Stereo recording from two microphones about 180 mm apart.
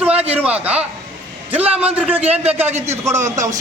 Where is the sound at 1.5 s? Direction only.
10° right (ahead or behind).